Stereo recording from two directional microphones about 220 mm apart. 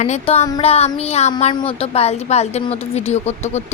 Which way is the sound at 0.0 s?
30° left (ahead or behind).